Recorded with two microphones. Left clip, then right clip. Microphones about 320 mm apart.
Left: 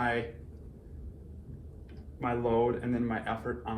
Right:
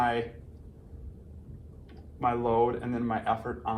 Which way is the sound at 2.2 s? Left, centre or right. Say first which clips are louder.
Right 3 dB; centre.